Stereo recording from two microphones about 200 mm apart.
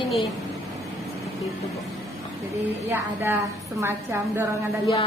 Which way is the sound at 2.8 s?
10° right (ahead or behind).